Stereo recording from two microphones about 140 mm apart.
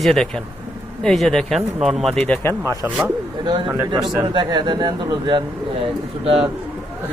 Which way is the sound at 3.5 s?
35° right (ahead or behind).